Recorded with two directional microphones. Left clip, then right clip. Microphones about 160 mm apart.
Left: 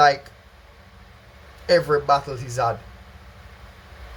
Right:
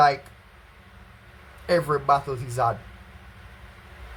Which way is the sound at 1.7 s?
Centre (ahead or behind).